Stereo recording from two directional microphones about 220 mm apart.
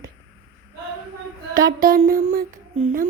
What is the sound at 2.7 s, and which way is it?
Speech, 25° right (ahead or behind).